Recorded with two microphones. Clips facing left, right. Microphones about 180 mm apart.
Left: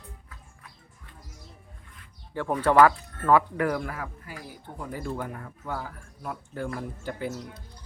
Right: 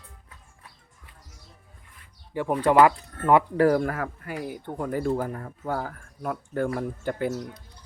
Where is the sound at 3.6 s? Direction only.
35° right (ahead or behind).